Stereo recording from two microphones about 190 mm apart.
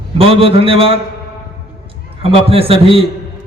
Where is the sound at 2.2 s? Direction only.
30° right (ahead or behind).